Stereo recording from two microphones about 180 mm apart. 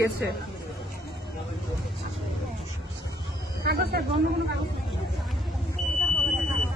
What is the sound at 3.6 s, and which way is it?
Speech, 60° right (ahead or behind).